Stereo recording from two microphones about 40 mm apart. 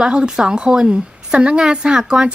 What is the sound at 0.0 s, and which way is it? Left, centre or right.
A woman's voice, right.